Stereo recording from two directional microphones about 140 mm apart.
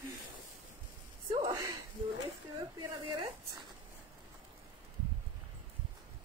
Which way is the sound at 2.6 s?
35° right (ahead or behind).